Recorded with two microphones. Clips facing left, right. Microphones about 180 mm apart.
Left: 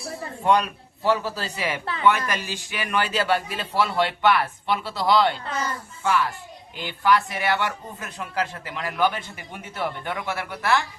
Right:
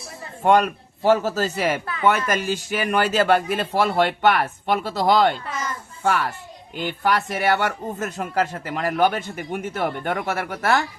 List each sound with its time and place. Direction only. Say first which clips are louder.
0.4 s speech: right 4 dB; 45° right (ahead or behind)
5.5 s a sound: left 1 dB; 30° left (ahead or behind)
6.0 s a child's voice: right 1 dB; 55° right (ahead or behind)